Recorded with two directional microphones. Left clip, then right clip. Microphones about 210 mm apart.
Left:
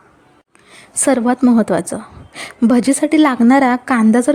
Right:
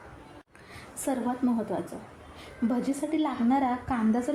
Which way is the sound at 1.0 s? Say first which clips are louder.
Left 16 dB; 50° left (ahead or behind).